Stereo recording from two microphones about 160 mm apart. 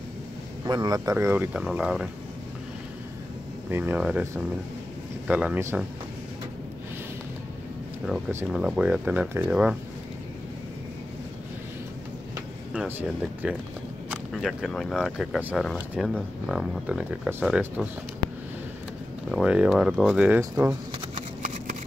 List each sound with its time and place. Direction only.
0.7 s speech: 25° right (ahead or behind); by 2.0 s 5° right (ahead or behind)
3.7 s speech: 10° right (ahead or behind)
5.3 s speech: 10° right (ahead or behind)
8.1 s speech: centre (ahead or behind)
12.7 s speech: 10° right (ahead or behind)
19.3 s speech: 5° right (ahead or behind)
20.3 s speech: 15° right (ahead or behind)
21.1 s a sound: 55° right (ahead or behind)